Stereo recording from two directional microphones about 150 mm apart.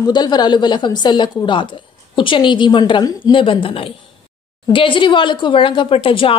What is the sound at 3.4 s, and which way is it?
Speech, 35° left (ahead or behind).